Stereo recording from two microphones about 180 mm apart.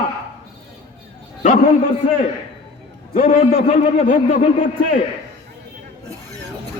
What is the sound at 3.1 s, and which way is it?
A man's voice, 40° left (ahead or behind).